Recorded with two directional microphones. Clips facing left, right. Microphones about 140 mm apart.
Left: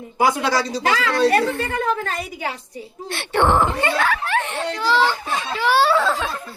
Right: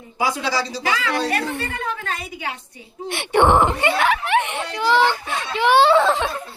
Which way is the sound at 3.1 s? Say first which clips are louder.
Right 2 dB; 15° right (ahead or behind).